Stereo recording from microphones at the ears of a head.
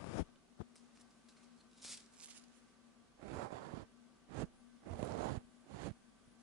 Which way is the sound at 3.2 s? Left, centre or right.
Right.